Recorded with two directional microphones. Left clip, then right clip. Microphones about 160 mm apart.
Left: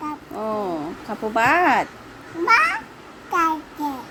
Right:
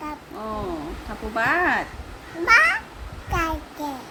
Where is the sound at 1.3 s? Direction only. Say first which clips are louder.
Left 4 dB; 60° left (ahead or behind).